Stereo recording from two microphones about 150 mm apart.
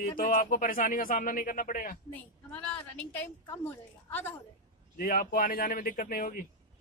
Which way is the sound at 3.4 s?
15° left (ahead or behind).